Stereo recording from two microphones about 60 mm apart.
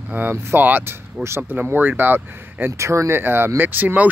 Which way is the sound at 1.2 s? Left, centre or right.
Centre.